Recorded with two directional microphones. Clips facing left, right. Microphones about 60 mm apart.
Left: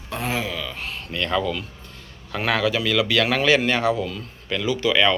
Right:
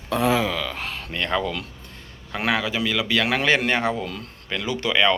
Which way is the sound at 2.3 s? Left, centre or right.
Centre.